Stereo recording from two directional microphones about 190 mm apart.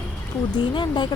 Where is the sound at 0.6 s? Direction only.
25° left (ahead or behind).